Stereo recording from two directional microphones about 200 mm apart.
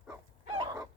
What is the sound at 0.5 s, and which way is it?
Dog, 15° right (ahead or behind).